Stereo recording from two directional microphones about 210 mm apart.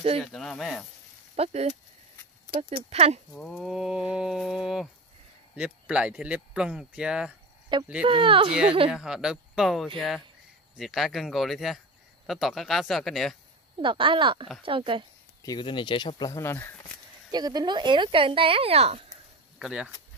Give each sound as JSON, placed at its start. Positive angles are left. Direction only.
{"t": 0.2, "sound": "speech", "side_deg": 5}
{"t": 1.3, "sound": "speech", "side_deg": -30}
{"t": 3.3, "sound": "speech", "side_deg": 0}
{"t": 8.0, "sound": "speech", "side_deg": -25}
{"t": 8.9, "sound": "speech", "side_deg": -5}
{"t": 13.7, "sound": "speech", "side_deg": -25}
{"t": 15.4, "sound": "speech", "side_deg": 20}
{"t": 17.3, "sound": "speech", "side_deg": -20}
{"t": 19.6, "sound": "speech", "side_deg": -5}